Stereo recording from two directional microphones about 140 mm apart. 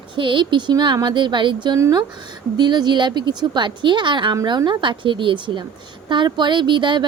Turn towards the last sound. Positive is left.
turn(degrees=-35)  # may be behind; listen again after turning